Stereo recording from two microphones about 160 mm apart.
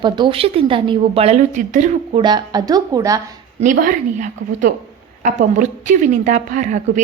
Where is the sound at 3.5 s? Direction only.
55° right (ahead or behind).